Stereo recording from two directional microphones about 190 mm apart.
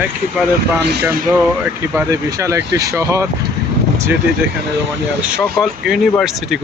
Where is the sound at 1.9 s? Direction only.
15° right (ahead or behind).